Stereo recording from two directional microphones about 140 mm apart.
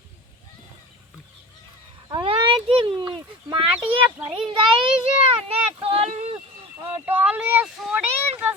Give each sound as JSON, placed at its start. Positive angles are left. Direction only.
{"t": 2.0, "sound": "a sound", "side_deg": -35}
{"t": 3.0, "sound": "speech", "side_deg": -35}
{"t": 7.0, "sound": "speech", "side_deg": -10}